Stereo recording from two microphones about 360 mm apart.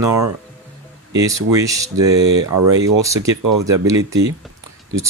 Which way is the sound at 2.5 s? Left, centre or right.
Right.